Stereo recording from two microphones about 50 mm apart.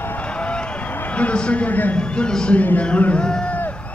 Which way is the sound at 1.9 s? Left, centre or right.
Centre.